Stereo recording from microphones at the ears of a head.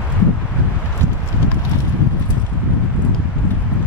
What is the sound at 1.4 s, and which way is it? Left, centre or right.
Clip-clop, left.